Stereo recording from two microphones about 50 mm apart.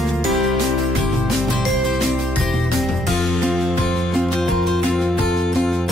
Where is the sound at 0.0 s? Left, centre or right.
Centre.